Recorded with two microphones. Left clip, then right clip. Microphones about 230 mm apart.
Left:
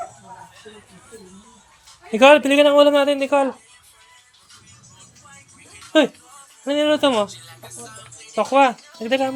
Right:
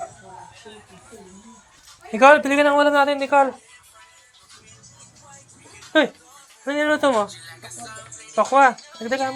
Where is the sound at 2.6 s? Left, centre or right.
Left.